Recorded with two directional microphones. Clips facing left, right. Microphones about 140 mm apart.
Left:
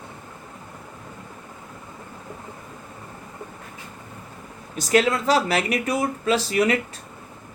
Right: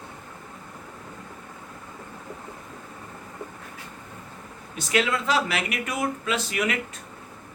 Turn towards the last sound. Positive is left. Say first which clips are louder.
# left 6 dB
turn(degrees=35)  # may be behind; listen again after turning